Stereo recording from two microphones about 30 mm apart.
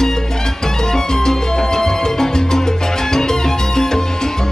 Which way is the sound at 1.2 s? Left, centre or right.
Centre.